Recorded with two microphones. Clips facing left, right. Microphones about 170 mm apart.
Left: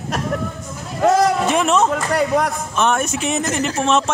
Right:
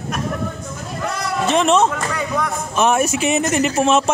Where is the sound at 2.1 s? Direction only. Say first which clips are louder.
Left 5 dB; 75° left (ahead or behind).